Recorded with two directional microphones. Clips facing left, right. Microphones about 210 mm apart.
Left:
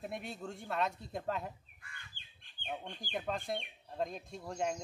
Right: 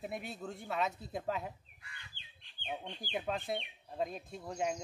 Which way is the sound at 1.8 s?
50° left (ahead or behind).